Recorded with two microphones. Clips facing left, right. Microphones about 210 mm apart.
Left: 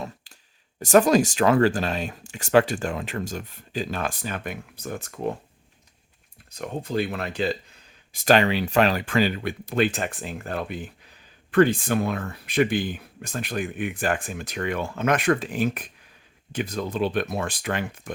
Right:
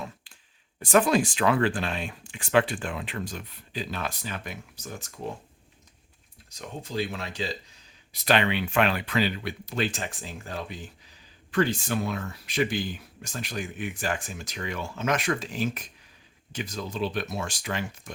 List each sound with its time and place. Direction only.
0.3 s a sound: 40° left (ahead or behind)
0.8 s speech: 40° left (ahead or behind); by 5.3 s 60° left (ahead or behind)
6.5 s speech: 55° left (ahead or behind)